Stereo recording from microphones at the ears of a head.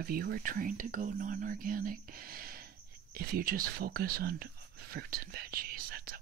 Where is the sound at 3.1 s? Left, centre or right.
Right.